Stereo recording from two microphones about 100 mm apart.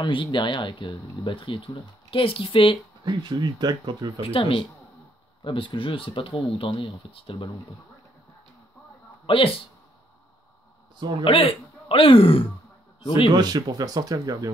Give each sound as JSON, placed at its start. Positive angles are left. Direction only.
{"t": 0.1, "sound": "speech", "side_deg": 55}
{"t": 3.1, "sound": "speech", "side_deg": -50}
{"t": 4.2, "sound": "speech", "side_deg": 65}
{"t": 9.2, "sound": "speech", "side_deg": 60}
{"t": 11.0, "sound": "speech", "side_deg": -50}
{"t": 11.2, "sound": "speech", "side_deg": 70}
{"t": 13.3, "sound": "speech", "side_deg": -45}